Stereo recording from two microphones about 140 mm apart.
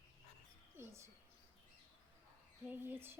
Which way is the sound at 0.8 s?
20° right (ahead or behind).